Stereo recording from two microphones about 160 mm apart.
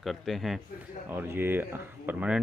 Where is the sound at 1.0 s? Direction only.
15° right (ahead or behind).